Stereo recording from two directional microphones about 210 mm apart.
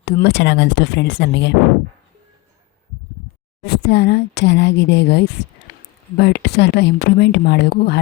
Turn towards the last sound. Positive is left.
turn(degrees=55)  # may be behind; listen again after turning